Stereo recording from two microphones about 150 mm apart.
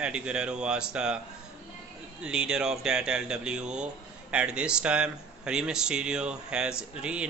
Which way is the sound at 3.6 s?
50° right (ahead or behind).